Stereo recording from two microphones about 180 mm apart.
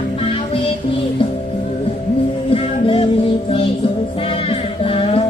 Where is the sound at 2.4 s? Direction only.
30° left (ahead or behind).